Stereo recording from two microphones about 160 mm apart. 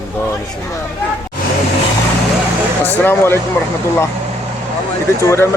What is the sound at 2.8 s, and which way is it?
Speech, 15° left (ahead or behind).